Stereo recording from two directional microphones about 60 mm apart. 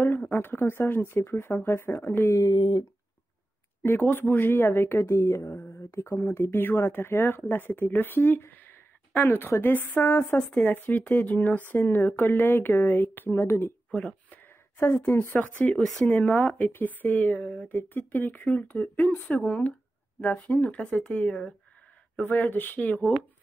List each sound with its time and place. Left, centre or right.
0.3 s a sound: left
0.7 s speech: left
3.8 s speech: left
10.3 s speech: left
13.5 s speech: left
13.9 s a sound: centre
14.8 s speech: left
17.6 s speech: left